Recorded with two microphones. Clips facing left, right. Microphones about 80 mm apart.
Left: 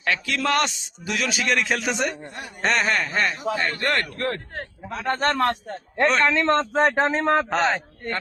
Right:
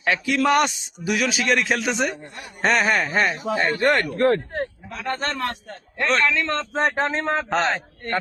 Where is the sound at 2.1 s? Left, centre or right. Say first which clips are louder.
Left 1 dB; left.